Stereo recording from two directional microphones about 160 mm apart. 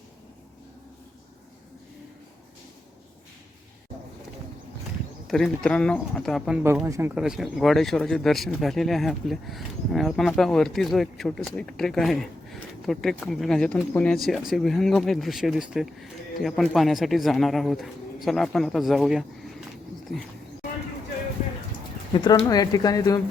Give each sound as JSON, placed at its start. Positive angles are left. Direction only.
{"t": 5.3, "sound": "speech", "side_deg": 5}
{"t": 6.8, "sound": "speech", "side_deg": -15}
{"t": 7.2, "sound": "speech", "side_deg": -5}
{"t": 22.1, "sound": "speech", "side_deg": 30}